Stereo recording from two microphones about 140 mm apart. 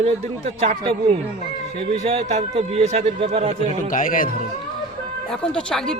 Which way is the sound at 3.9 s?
75° left (ahead or behind).